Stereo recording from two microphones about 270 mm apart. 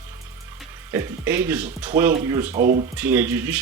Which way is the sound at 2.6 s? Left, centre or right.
Right.